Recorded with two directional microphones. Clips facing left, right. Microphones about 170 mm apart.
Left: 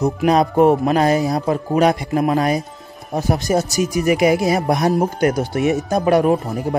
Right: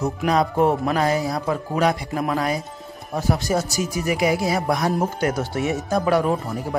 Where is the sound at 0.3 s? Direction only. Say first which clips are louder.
Left 5 dB; 20° left (ahead or behind).